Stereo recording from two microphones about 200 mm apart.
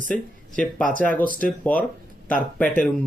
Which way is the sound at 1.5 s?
5° left (ahead or behind).